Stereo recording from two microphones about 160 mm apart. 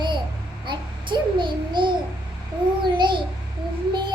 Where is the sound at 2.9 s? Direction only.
30° right (ahead or behind).